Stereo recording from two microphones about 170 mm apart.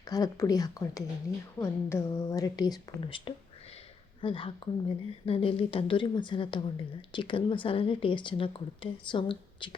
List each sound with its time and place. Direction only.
0.0 s a woman's voice: 20° left (ahead or behind)